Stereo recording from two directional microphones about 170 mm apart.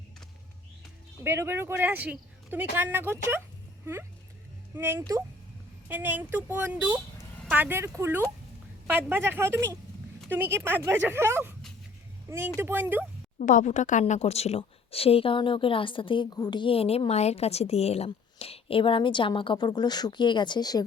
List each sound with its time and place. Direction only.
1.2 s speech: 15° right (ahead or behind)
4.7 s speech: 15° right (ahead or behind)
12.5 s speech: 10° right (ahead or behind)
13.4 s a woman's voice: 50° left (ahead or behind); by 20.8 s 25° left (ahead or behind)